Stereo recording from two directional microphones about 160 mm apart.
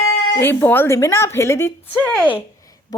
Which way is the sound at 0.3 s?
15° left (ahead or behind).